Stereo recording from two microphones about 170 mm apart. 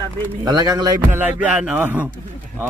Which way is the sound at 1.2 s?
10° right (ahead or behind).